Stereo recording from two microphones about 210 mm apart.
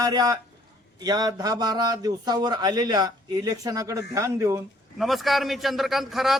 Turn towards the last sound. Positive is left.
turn(degrees=0)  # may be behind; listen again after turning